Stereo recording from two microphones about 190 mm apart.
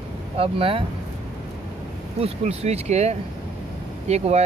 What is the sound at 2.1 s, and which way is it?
Speech, 35° right (ahead or behind).